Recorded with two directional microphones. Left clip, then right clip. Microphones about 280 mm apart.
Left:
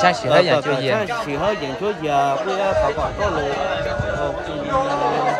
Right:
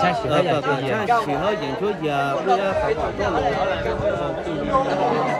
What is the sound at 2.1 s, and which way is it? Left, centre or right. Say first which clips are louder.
Speech: left 2 dB; left.